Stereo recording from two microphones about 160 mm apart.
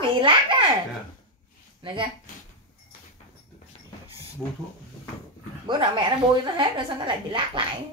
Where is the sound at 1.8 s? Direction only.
30° right (ahead or behind).